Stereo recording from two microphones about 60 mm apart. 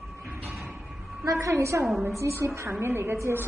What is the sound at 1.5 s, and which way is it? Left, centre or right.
A woman's voice, right.